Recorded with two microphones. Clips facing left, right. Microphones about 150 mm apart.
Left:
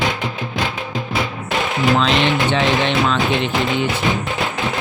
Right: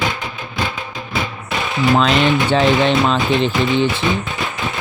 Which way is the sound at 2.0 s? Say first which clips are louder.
Right 2 dB; 40° right (ahead or behind).